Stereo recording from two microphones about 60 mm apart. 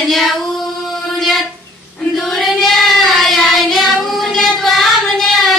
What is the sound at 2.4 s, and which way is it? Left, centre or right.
Child singing, centre.